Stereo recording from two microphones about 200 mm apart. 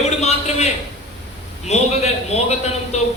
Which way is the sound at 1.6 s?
35° left (ahead or behind).